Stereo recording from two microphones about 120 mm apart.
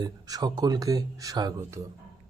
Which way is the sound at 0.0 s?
35° right (ahead or behind).